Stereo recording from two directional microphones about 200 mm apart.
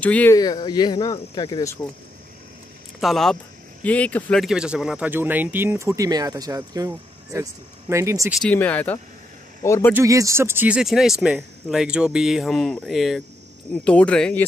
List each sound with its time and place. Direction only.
0.0 s speech: 10° left (ahead or behind)
0.4 s speech: 20° left (ahead or behind)
3.0 s speech: centre (ahead or behind)
8.4 s a man's voice: 5° left (ahead or behind)
9.9 s speech: 15° right (ahead or behind); by 14.4 s 5° left (ahead or behind)